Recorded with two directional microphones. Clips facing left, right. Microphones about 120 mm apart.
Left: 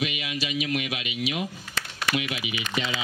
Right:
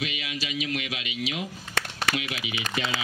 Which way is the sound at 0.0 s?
15° left (ahead or behind).